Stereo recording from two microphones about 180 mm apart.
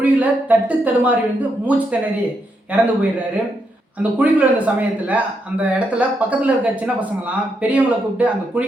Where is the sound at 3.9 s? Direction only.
10° right (ahead or behind).